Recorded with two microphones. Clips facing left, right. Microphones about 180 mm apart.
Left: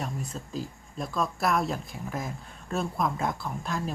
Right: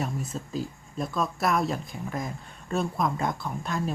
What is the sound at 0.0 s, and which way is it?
Speech, centre (ahead or behind).